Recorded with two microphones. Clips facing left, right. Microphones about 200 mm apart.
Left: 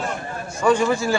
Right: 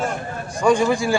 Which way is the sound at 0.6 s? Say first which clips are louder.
Right 1 dB; 15° right (ahead or behind).